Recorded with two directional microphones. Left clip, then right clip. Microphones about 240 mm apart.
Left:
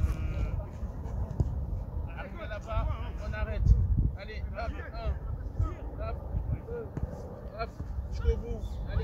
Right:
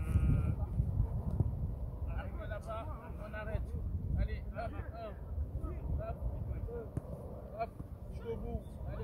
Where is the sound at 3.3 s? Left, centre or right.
Centre.